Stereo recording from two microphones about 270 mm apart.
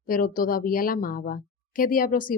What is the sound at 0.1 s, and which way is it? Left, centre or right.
Speech, left.